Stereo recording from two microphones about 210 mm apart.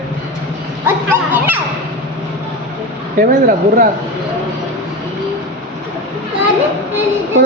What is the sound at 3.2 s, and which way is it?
Speech, 40° right (ahead or behind).